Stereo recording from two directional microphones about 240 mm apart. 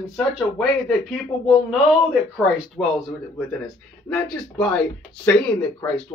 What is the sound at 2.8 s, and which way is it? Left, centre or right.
Speech, centre.